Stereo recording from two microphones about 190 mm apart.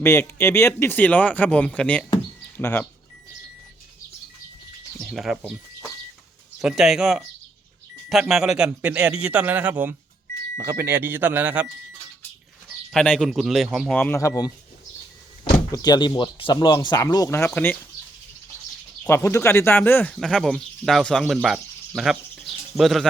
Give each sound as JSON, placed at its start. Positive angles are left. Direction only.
{"t": 0.0, "sound": "speech", "side_deg": 15}
{"t": 4.9, "sound": "a man's voice", "side_deg": 0}
{"t": 12.9, "sound": "a man's voice", "side_deg": 5}
{"t": 19.0, "sound": "speech", "side_deg": 15}
{"t": 21.4, "sound": "bird", "side_deg": 0}